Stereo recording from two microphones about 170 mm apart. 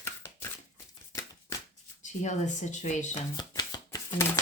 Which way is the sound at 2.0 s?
45° left (ahead or behind).